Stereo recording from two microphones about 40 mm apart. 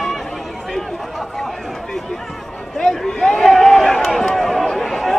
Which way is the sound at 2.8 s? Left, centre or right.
Centre.